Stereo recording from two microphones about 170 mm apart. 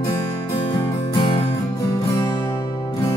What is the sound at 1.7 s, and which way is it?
Music, 20° left (ahead or behind).